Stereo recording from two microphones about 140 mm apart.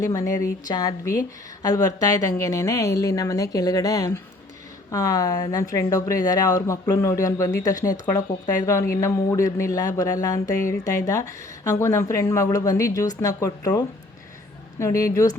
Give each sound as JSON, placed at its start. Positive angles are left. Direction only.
{"t": 0.0, "sound": "speech", "side_deg": 25}